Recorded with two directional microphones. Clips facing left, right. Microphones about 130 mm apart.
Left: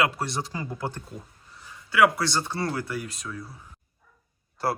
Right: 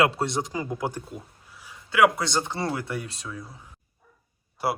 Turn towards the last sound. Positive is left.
turn(degrees=-10)  # may be behind; listen again after turning